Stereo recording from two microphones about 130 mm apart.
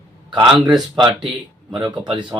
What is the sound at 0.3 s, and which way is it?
Speech, 35° right (ahead or behind).